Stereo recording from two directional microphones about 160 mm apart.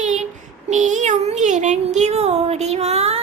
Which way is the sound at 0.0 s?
45° right (ahead or behind).